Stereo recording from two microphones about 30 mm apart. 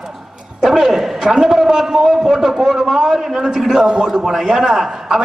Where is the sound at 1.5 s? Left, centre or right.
Centre.